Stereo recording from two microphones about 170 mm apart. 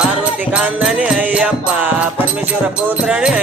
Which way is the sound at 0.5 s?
5° right (ahead or behind).